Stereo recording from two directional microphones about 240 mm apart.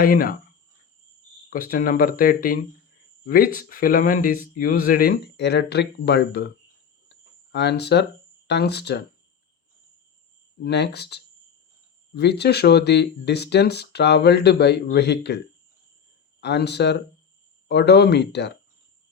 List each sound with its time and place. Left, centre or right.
0.0 s speech: left
1.5 s speech: left
7.1 s a sound: left
8.4 s speech: left
10.6 s speech: left
16.4 s speech: left